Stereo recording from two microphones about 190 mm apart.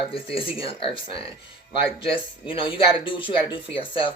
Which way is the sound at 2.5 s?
25° left (ahead or behind).